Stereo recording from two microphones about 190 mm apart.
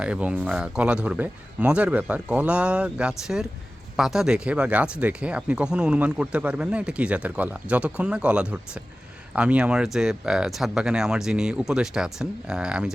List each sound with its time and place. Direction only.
0.0 s speech: 5° right (ahead or behind)